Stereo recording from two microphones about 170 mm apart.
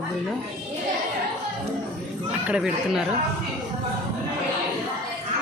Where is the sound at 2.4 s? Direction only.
5° right (ahead or behind).